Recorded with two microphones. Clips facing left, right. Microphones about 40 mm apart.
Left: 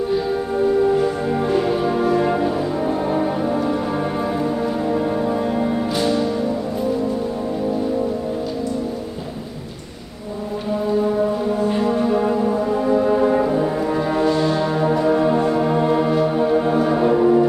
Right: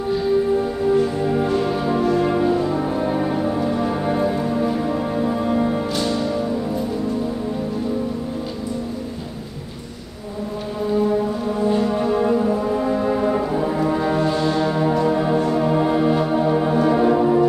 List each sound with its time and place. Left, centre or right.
0.9 s music: centre
11.9 s brass instrument: centre